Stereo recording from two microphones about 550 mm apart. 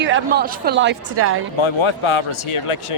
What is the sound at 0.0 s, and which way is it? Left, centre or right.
A woman's voice, centre.